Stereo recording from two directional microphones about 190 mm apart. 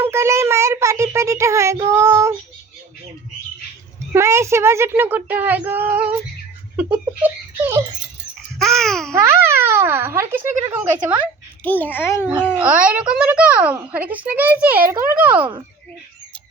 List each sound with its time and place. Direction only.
0.0 s child singing: 15° right (ahead or behind)
4.1 s speech: 15° right (ahead or behind)
8.5 s babbling: centre (ahead or behind)
9.1 s speech: 15° right (ahead or behind)
11.6 s a child's voice: 10° left (ahead or behind)
12.2 s speech: 10° right (ahead or behind)